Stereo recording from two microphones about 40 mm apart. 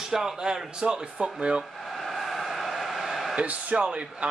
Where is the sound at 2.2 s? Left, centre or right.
Centre.